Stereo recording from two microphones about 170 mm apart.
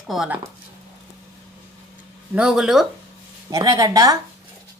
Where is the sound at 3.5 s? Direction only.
20° right (ahead or behind).